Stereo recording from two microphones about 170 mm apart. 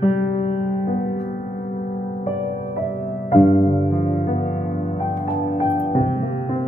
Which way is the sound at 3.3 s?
40° left (ahead or behind).